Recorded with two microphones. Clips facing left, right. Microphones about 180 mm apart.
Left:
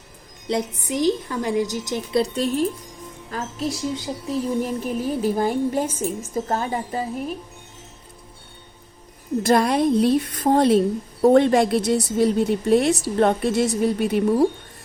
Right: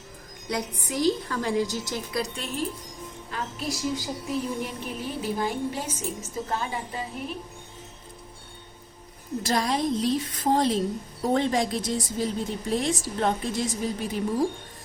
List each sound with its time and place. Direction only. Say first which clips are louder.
0.4 s a woman's voice: left 6 dB; 25° left (ahead or behind)
2.2 s speech: left 9 dB; 35° left (ahead or behind)
9.4 s a woman's voice: left 8 dB; 55° left (ahead or behind)